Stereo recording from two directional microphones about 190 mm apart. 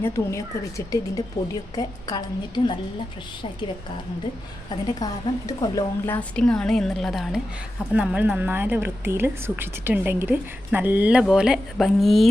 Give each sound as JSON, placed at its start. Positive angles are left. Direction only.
{"t": 0.0, "sound": "speech", "side_deg": 15}
{"t": 1.4, "sound": "a woman's voice", "side_deg": 40}
{"t": 1.7, "sound": "a woman's voice", "side_deg": 20}
{"t": 4.7, "sound": "a woman's voice", "side_deg": 20}
{"t": 6.1, "sound": "a woman's voice", "side_deg": 5}